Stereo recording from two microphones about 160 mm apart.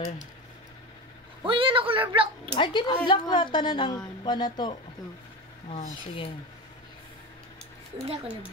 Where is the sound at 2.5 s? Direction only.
30° left (ahead or behind).